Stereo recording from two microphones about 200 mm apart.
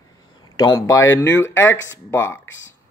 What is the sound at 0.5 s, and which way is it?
A man's voice, 20° left (ahead or behind).